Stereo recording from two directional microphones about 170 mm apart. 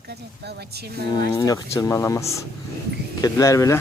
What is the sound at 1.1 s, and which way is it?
Speech, 20° left (ahead or behind).